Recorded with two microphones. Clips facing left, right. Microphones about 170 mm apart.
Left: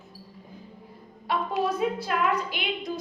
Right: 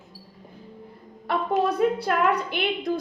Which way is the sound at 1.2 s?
60° right (ahead or behind).